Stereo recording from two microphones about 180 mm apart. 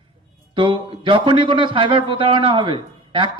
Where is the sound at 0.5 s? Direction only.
25° right (ahead or behind).